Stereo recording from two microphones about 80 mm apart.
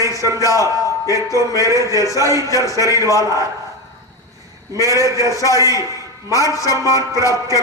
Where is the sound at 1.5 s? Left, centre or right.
Left.